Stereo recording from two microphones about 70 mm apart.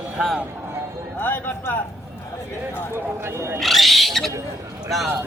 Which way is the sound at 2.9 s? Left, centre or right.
Right.